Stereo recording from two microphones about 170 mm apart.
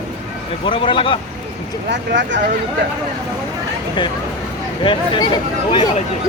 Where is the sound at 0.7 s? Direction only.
30° left (ahead or behind).